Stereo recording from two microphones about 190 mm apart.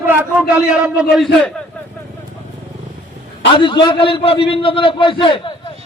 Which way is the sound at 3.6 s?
25° left (ahead or behind).